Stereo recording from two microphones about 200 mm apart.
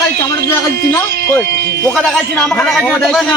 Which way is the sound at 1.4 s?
55° right (ahead or behind).